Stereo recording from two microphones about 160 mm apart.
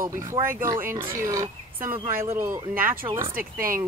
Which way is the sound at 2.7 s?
65° right (ahead or behind).